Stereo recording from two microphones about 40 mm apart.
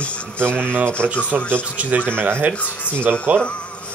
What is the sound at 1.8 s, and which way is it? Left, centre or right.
Speech, right.